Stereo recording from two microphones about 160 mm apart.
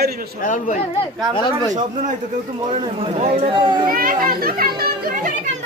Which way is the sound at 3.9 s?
65° right (ahead or behind).